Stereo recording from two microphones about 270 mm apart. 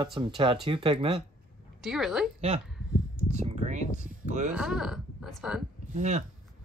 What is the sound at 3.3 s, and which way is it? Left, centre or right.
Speech, right.